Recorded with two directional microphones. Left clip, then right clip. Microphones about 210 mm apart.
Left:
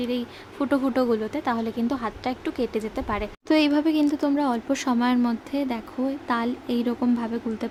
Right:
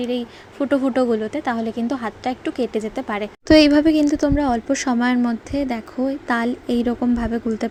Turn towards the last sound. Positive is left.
turn(degrees=-15)  # may be behind; listen again after turning